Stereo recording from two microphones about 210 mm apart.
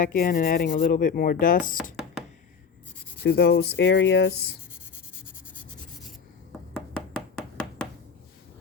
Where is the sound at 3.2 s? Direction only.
50° left (ahead or behind).